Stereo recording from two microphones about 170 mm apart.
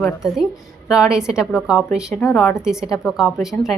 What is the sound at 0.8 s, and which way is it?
Speech, 5° right (ahead or behind).